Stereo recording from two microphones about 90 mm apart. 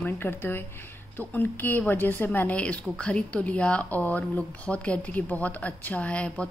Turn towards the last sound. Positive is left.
turn(degrees=15)  # may be behind; listen again after turning